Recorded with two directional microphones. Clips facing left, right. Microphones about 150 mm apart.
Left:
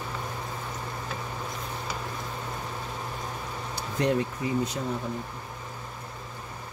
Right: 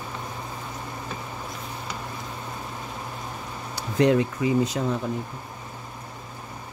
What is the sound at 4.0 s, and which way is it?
Speech, 90° right.